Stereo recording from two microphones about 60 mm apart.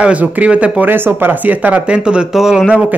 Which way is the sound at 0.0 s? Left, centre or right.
Right.